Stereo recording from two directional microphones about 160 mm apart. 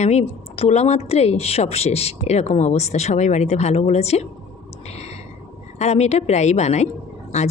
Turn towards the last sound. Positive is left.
turn(degrees=45)  # may be behind; listen again after turning